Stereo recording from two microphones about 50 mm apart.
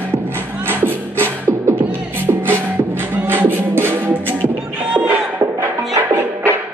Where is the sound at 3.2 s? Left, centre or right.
Right.